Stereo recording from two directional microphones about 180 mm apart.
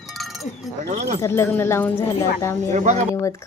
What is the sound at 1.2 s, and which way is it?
A woman's voice, 15° left (ahead or behind).